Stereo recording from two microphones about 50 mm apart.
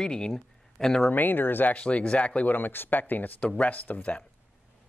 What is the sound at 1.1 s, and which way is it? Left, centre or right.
Speech, left.